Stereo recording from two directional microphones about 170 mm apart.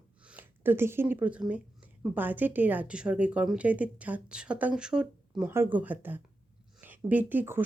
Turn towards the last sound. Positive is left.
turn(degrees=-10)  # may be behind; listen again after turning